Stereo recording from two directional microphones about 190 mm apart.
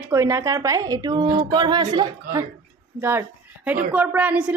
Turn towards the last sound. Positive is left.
turn(degrees=-5)  # may be behind; listen again after turning